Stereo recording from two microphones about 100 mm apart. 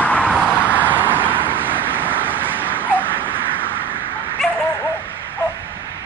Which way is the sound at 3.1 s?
20° right (ahead or behind).